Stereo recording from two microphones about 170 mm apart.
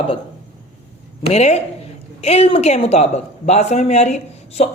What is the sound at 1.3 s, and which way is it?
A woman's voice, 40° left (ahead or behind).